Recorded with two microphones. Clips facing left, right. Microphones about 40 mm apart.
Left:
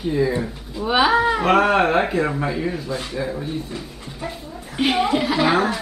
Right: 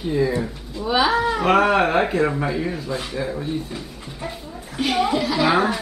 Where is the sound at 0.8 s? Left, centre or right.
Centre.